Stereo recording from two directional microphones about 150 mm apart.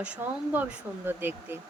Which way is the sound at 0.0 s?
10° right (ahead or behind).